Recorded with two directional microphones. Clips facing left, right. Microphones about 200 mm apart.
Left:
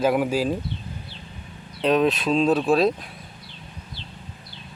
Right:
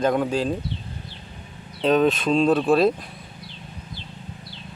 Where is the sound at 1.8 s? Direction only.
Centre (ahead or behind).